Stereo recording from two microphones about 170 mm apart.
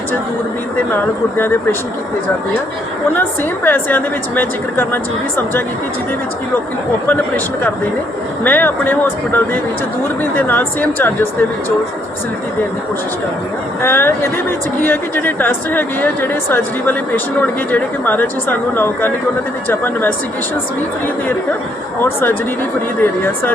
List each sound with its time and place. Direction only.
3.2 s speech: 10° left (ahead or behind)
7.1 s speech: 10° left (ahead or behind)
13.8 s speech: 15° left (ahead or behind)
22.0 s speech: 10° left (ahead or behind)